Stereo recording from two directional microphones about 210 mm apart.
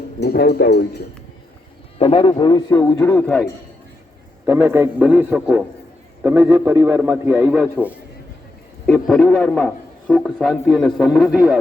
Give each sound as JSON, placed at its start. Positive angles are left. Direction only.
{"t": 0.2, "sound": "speech", "side_deg": 50}
{"t": 2.0, "sound": "speech", "side_deg": 25}
{"t": 4.4, "sound": "a man's voice", "side_deg": -10}